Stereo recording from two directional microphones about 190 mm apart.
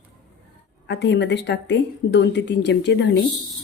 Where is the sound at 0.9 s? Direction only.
65° left (ahead or behind).